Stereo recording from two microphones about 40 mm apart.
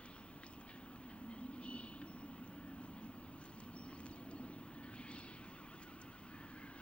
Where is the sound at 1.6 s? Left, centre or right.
Left.